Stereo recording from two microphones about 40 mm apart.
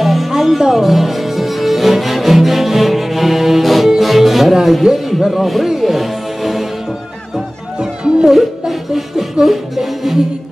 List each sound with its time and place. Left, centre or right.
0.0 s music: centre
5.2 s speech: centre
5.7 s music: centre
7.8 s music: centre
8.3 s music: centre